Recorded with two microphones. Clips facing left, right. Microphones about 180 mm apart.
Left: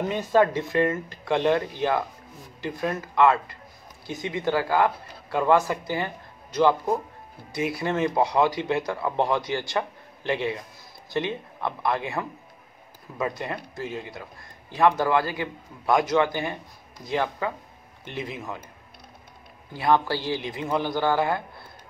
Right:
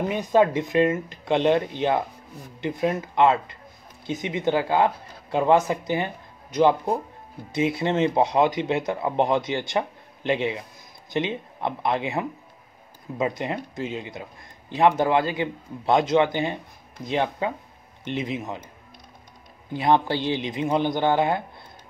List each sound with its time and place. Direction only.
0.1 s speech: 15° right (ahead or behind)
19.7 s speech: 20° right (ahead or behind)